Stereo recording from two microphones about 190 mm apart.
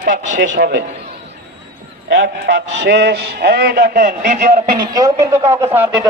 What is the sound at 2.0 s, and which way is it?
A man's voice, 70° right (ahead or behind).